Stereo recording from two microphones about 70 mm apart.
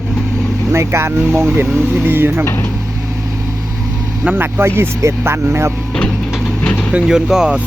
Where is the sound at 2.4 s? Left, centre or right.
Left.